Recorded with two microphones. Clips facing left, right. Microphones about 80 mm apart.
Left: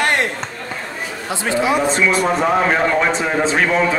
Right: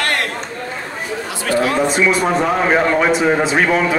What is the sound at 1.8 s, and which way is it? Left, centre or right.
A man's voice, centre.